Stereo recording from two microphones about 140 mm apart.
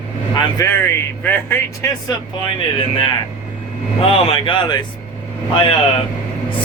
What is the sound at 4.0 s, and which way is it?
Speech, 40° left (ahead or behind).